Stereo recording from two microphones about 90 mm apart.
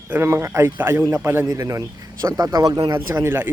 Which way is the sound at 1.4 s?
40° right (ahead or behind).